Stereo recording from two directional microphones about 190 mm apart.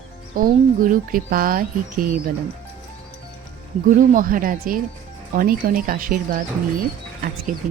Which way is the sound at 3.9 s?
45° right (ahead or behind).